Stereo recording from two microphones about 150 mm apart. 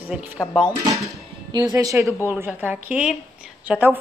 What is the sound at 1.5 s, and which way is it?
A woman's voice, 25° right (ahead or behind).